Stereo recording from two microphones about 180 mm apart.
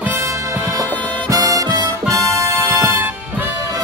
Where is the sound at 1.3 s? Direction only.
20° right (ahead or behind).